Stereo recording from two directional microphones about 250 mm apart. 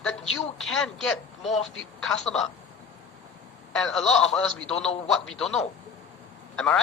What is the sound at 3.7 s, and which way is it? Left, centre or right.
Speech, centre.